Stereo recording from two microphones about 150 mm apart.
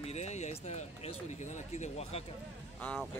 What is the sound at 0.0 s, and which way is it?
Speech, 45° left (ahead or behind).